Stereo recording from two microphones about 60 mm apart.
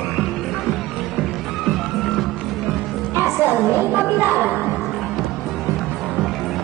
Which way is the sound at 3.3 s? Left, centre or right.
Right.